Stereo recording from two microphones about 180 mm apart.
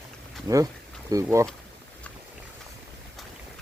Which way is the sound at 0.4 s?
20° right (ahead or behind).